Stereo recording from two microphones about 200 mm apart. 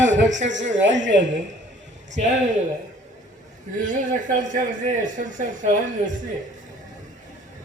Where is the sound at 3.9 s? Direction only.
40° right (ahead or behind).